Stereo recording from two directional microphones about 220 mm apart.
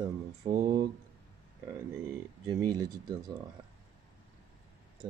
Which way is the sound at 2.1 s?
15° right (ahead or behind).